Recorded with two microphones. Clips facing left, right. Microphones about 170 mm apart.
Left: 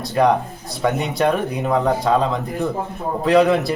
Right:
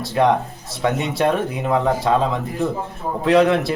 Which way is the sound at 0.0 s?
Centre (ahead or behind).